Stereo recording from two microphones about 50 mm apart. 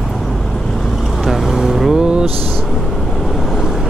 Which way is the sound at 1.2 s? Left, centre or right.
Centre.